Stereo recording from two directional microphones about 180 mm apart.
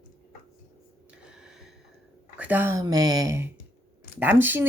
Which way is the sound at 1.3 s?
5° right (ahead or behind).